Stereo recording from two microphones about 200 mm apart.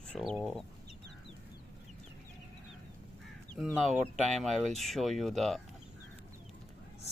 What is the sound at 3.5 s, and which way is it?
Speech, centre (ahead or behind).